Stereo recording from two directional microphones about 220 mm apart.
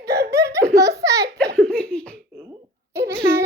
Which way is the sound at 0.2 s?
15° right (ahead or behind).